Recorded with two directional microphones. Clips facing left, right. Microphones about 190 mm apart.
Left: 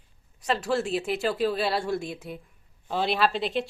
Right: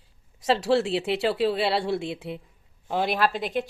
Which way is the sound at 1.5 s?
70° right (ahead or behind).